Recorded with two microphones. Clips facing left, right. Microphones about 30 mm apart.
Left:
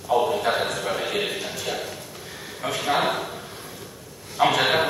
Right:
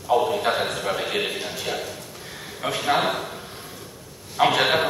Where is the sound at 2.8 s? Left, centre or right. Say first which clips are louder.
Right 1 dB; centre.